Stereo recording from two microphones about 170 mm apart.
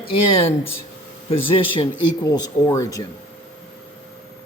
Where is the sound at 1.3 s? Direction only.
35° left (ahead or behind); by 3.1 s 20° left (ahead or behind).